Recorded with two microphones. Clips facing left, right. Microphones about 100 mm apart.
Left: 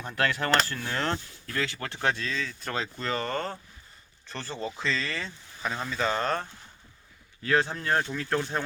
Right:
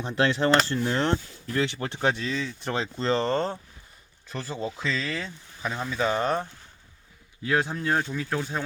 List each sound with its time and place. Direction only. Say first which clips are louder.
0.0 s speech: right 5 dB; 20° right (ahead or behind)
4.3 s speech: right 3 dB; 5° right (ahead or behind)